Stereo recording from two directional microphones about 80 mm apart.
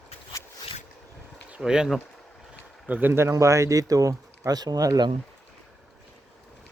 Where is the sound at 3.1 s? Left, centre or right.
Right.